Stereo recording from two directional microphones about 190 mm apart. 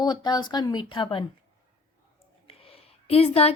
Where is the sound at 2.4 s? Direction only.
30° left (ahead or behind).